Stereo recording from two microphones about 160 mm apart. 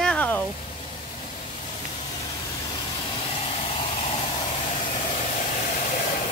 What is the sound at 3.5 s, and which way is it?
Vehicle, 35° left (ahead or behind).